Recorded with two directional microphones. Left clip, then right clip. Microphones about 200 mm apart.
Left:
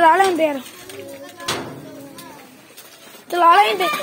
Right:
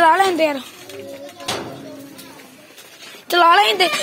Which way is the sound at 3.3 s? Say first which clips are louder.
Even; 5° right (ahead or behind).